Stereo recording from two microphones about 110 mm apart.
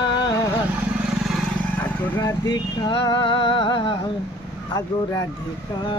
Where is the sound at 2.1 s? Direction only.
35° left (ahead or behind).